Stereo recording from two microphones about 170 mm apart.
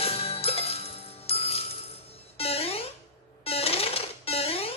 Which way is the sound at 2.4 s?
35° left (ahead or behind).